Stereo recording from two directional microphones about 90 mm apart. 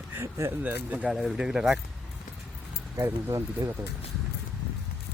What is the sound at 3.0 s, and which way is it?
Speech, 30° right (ahead or behind).